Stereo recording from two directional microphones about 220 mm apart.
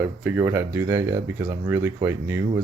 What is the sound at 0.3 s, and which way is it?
Speech, 10° right (ahead or behind).